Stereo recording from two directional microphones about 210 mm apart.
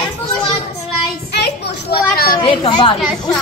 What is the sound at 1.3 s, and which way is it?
Children playing, 50° left (ahead or behind).